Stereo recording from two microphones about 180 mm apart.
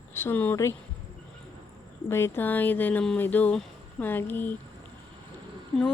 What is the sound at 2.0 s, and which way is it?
Speech, 15° left (ahead or behind).